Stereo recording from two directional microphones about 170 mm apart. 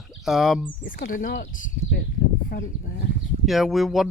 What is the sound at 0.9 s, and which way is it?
Speech, 45° left (ahead or behind).